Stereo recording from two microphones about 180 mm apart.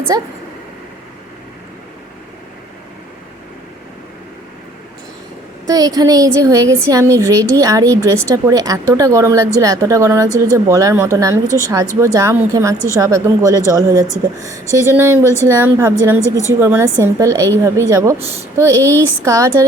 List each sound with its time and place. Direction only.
0.1 s a woman's voice: 20° right (ahead or behind)
5.6 s a woman's voice: 20° right (ahead or behind)